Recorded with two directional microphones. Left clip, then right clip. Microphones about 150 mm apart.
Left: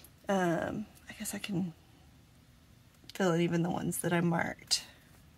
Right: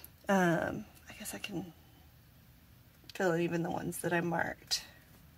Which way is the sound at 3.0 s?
20° left (ahead or behind).